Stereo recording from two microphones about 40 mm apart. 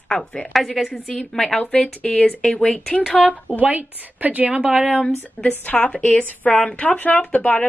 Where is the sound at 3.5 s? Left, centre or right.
Right.